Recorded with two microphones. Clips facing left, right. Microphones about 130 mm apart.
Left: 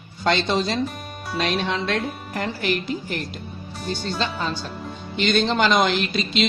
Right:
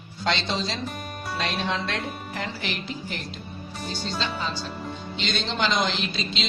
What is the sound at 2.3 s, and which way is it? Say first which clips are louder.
Speech: left 7 dB; 50° left (ahead or behind).